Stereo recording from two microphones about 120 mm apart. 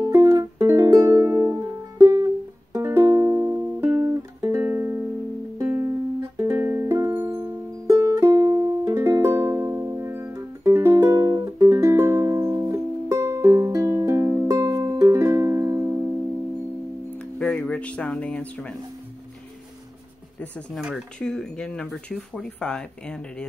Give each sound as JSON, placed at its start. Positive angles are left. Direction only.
{"t": 0.0, "sound": "music", "side_deg": -25}
{"t": 17.4, "sound": "a sound", "side_deg": 10}
{"t": 20.7, "sound": "speech", "side_deg": 0}